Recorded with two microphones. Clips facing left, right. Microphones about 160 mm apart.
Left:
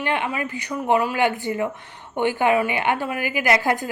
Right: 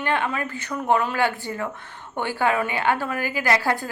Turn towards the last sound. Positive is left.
turn(degrees=15)  # may be behind; listen again after turning